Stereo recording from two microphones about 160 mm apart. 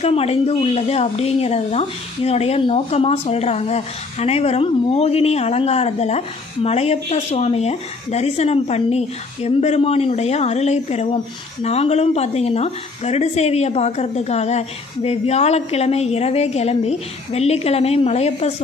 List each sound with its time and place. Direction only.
0.0 s speech: 40° left (ahead or behind)